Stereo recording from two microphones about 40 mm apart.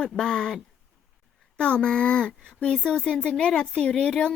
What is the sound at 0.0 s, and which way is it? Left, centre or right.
Speech, centre.